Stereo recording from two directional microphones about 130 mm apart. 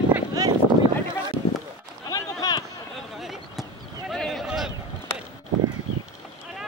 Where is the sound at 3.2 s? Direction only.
Centre (ahead or behind).